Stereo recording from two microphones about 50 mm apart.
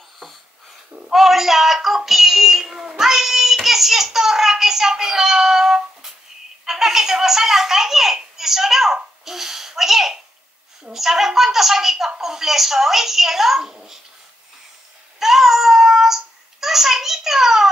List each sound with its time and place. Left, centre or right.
1.1 s child singing: centre
6.6 s a child's voice: centre
15.1 s babbling: centre